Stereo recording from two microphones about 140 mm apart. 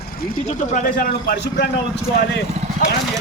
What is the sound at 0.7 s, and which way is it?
Speech, 70° left (ahead or behind).